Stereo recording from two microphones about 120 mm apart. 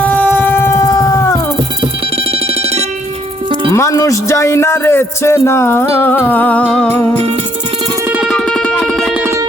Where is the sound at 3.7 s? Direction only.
25° left (ahead or behind).